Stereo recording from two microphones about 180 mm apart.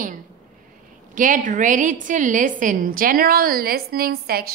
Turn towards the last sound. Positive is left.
turn(degrees=-60)  # may be behind; listen again after turning